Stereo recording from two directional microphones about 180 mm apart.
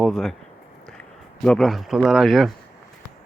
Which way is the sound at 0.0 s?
Centre (ahead or behind).